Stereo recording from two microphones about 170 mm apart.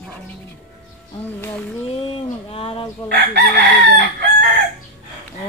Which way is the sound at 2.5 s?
35° left (ahead or behind).